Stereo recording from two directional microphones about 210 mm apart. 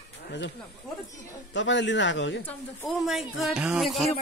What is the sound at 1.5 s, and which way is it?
Speech, 60° left (ahead or behind).